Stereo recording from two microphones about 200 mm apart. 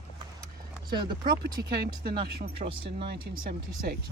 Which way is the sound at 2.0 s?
50° right (ahead or behind).